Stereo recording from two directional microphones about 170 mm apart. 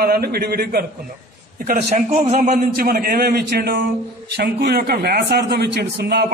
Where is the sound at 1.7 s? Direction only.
40° right (ahead or behind).